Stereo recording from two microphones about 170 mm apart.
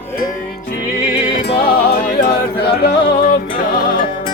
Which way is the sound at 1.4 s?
75° left (ahead or behind).